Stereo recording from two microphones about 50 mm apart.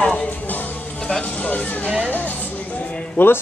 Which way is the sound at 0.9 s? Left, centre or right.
Centre.